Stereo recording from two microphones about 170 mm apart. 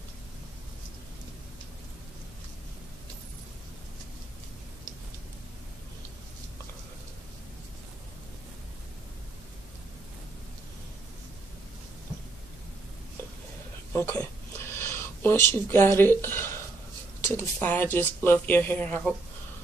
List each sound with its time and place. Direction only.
13.9 s speech: 15° left (ahead or behind)